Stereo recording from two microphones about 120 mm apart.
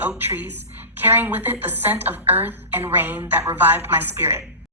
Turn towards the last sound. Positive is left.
turn(degrees=-20)  # may be behind; listen again after turning